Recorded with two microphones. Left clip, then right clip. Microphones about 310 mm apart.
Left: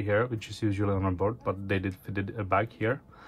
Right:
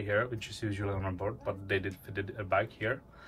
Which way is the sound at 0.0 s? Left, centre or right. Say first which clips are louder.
Left 4 dB; centre.